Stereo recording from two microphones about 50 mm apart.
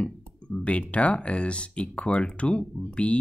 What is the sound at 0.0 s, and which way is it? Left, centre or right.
Speech, left.